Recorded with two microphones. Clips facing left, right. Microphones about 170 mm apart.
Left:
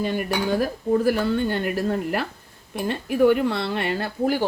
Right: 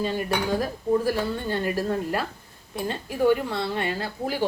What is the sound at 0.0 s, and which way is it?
Speech, 65° left (ahead or behind).